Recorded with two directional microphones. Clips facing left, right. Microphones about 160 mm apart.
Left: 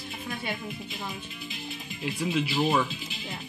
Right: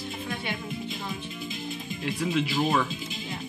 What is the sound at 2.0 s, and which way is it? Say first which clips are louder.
Speech: right 1 dB; 5° left (ahead or behind).